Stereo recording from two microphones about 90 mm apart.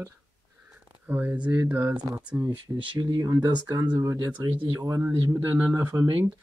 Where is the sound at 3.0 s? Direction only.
40° right (ahead or behind).